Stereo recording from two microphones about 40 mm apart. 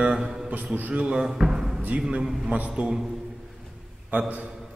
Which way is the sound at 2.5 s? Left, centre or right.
Right.